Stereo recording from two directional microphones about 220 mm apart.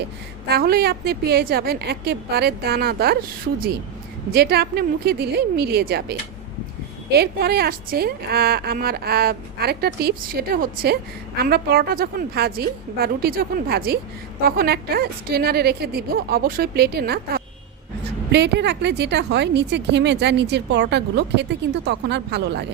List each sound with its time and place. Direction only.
0.4 s a woman's voice: 45° right (ahead or behind)